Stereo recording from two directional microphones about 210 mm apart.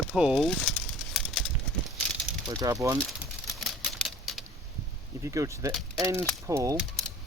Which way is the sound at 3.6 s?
Centre (ahead or behind).